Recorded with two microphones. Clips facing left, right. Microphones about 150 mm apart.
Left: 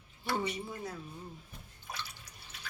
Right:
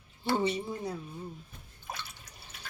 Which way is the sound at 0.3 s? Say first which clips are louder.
Right 6 dB; 30° right (ahead or behind).